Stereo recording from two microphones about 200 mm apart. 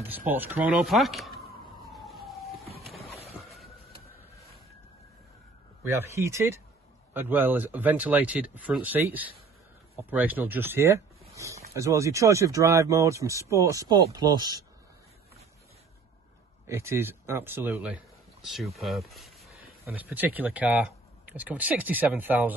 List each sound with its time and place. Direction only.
0.1 s speech: 10° right (ahead or behind)
1.8 s emergency vehicle: centre (ahead or behind)
2.8 s a sound: centre (ahead or behind)
6.1 s speech: 15° right (ahead or behind)
11.3 s a sound: 15° right (ahead or behind)
11.7 s speech: 15° right (ahead or behind)
16.6 s speech: 15° right (ahead or behind)
19.1 s a sound: centre (ahead or behind)
19.8 s speech: 10° right (ahead or behind)